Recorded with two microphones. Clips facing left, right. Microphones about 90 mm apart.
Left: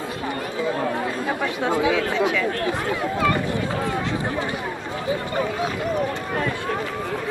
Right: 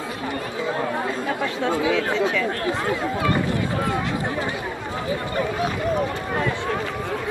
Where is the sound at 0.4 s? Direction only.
20° right (ahead or behind).